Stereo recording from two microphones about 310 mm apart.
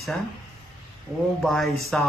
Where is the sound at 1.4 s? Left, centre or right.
Centre.